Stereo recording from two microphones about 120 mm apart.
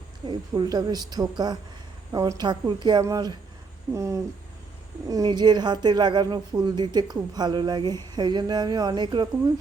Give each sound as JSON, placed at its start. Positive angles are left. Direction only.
{"t": 0.3, "sound": "speech", "side_deg": -40}